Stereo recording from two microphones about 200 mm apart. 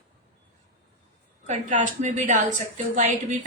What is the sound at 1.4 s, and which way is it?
Speech, 40° right (ahead or behind).